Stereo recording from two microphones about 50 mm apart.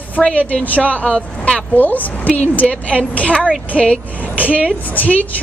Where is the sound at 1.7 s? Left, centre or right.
Left.